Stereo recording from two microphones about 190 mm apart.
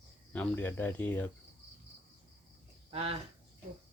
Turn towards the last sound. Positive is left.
turn(degrees=-30)  # may be behind; listen again after turning